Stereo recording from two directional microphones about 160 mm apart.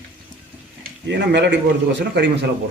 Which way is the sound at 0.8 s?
90° right.